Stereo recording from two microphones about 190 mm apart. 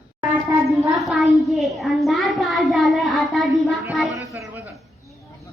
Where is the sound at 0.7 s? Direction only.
Centre (ahead or behind).